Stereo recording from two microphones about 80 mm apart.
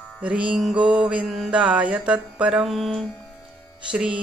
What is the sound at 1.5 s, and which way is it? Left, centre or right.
Music, centre.